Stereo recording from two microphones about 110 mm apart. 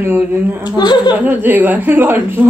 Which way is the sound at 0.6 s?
40° left (ahead or behind).